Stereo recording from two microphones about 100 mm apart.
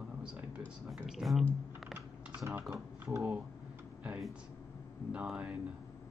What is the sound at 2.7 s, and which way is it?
Speech, 25° right (ahead or behind).